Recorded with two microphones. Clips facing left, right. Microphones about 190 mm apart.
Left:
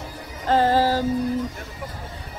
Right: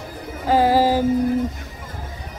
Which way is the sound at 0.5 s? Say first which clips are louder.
Right 3 dB; 10° right (ahead or behind).